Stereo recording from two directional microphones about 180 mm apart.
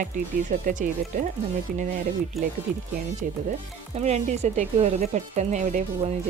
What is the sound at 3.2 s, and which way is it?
Speech, 50° right (ahead or behind).